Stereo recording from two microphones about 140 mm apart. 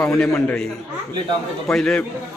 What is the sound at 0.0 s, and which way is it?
Speech, 5° left (ahead or behind).